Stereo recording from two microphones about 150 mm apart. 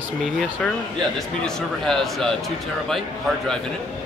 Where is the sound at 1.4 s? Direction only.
5° left (ahead or behind).